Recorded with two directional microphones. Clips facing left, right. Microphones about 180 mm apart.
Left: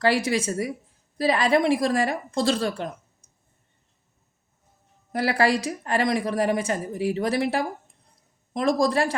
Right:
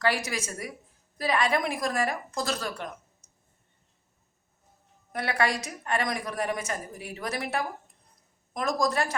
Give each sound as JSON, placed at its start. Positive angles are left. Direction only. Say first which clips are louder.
{"t": 0.0, "sound": "a woman's voice", "louder": "left 6 dB", "side_deg": 30}
{"t": 5.1, "sound": "a woman's voice", "louder": "left 6 dB", "side_deg": 30}